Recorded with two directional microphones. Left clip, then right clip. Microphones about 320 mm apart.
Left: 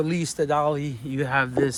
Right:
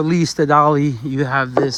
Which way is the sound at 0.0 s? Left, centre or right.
Right.